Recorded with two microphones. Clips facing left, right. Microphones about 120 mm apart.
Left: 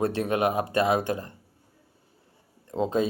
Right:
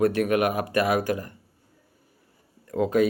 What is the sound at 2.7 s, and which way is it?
Speech, 25° left (ahead or behind).